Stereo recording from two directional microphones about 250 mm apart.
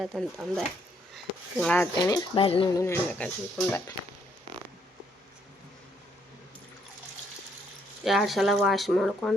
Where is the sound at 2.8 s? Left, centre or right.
Centre.